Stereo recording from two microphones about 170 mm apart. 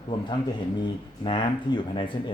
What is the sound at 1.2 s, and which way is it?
Speech, 30° left (ahead or behind).